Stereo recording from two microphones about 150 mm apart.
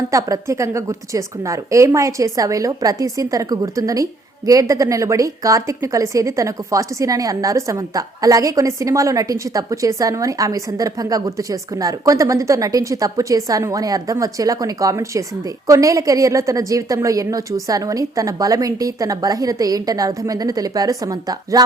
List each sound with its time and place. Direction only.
0.1 s a woman's voice: 20° right (ahead or behind)